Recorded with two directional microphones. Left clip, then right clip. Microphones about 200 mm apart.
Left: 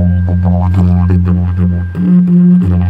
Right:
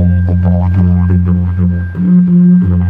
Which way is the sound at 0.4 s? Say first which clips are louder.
Left 2 dB; 30° left (ahead or behind).